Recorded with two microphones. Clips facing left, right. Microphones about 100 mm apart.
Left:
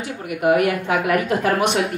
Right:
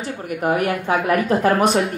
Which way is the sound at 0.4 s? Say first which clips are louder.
Left 3 dB; 35° right (ahead or behind).